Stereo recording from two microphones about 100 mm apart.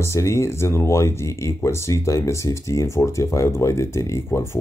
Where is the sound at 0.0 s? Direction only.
30° left (ahead or behind).